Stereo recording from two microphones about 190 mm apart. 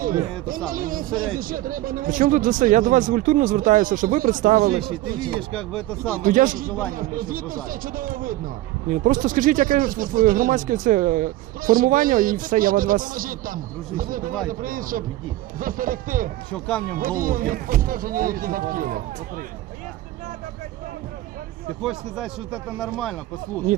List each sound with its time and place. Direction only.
0.0 s speech: 45° right (ahead or behind)
5.5 s speech: 5° left (ahead or behind)
6.2 s speech: 45° right (ahead or behind)
16.5 s speech: 5° left (ahead or behind)
16.9 s speech: 45° right (ahead or behind)
21.8 s speech: centre (ahead or behind)
23.7 s speech: 40° right (ahead or behind)